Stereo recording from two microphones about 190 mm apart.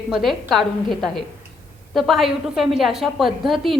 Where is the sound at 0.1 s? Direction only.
Centre (ahead or behind).